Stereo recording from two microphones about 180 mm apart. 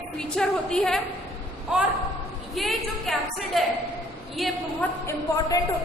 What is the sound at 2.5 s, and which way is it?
A woman's voice, centre (ahead or behind).